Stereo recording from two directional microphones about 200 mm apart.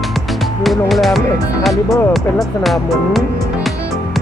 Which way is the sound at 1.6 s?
Centre (ahead or behind).